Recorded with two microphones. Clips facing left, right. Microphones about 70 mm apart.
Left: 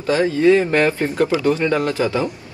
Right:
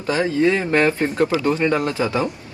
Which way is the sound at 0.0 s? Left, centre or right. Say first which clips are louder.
Left 3 dB; right.